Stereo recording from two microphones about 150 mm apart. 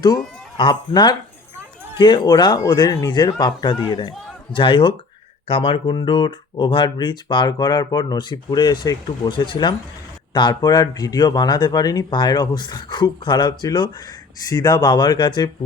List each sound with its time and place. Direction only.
0.5 s speech: 30° left (ahead or behind)